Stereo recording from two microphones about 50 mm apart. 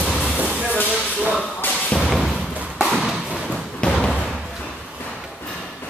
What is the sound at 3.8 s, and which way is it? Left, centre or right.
Slam, left.